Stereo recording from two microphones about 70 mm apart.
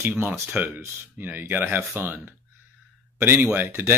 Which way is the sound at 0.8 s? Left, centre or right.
Right.